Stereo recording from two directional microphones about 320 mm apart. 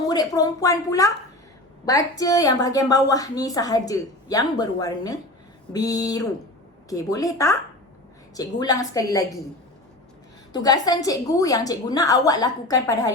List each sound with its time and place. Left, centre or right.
0.1 s a woman's voice: centre
10.5 s a woman's voice: centre